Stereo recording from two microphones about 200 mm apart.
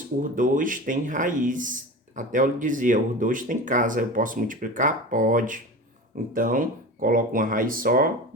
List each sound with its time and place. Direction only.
0.2 s speech: 40° right (ahead or behind)